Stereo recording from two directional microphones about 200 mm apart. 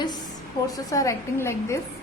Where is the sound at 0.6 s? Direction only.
15° left (ahead or behind).